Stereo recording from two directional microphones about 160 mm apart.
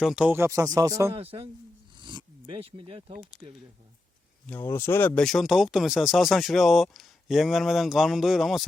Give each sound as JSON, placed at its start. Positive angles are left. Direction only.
{"t": 0.0, "sound": "speech", "side_deg": -5}
{"t": 1.1, "sound": "a man's voice", "side_deg": -35}
{"t": 2.0, "sound": "a sound", "side_deg": -30}
{"t": 3.4, "sound": "speech", "side_deg": 0}
{"t": 4.4, "sound": "speech", "side_deg": 15}